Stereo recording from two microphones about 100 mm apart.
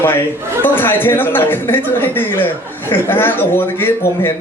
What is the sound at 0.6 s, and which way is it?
Speech, 20° left (ahead or behind).